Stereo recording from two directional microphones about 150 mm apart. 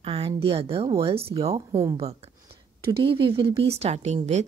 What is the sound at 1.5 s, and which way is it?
Speech, 20° right (ahead or behind).